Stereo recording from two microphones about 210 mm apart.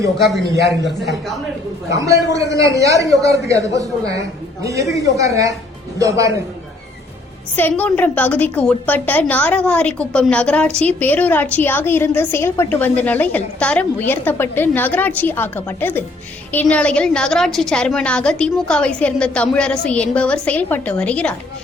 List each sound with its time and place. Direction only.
1.9 s a man's voice: 15° right (ahead or behind)
7.5 s a woman's voice: 10° left (ahead or behind)